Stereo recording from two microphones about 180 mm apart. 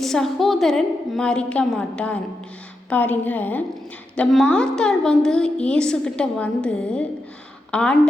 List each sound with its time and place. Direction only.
0.0 s a woman's voice: centre (ahead or behind)